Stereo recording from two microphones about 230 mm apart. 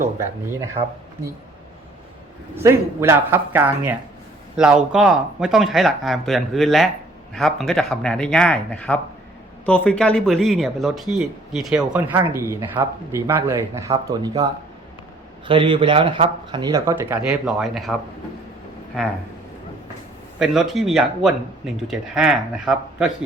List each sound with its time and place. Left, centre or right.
0.8 s speech: right
2.6 s speech: centre
20.4 s speech: centre